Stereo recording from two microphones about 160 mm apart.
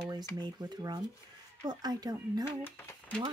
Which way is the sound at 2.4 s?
15° left (ahead or behind).